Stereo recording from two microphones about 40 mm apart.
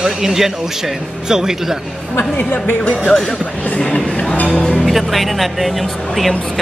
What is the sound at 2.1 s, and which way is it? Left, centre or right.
Speech, left.